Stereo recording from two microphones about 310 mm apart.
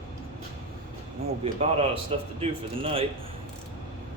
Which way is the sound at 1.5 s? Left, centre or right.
Right.